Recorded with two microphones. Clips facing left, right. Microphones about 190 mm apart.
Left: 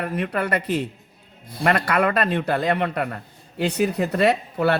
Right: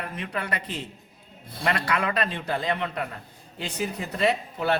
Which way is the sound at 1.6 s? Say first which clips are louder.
Left 6 dB; 55° left (ahead or behind).